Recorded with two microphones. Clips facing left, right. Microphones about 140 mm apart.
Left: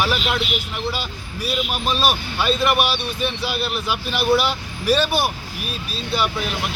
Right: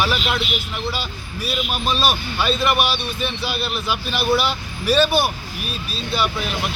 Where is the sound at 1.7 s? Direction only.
10° left (ahead or behind).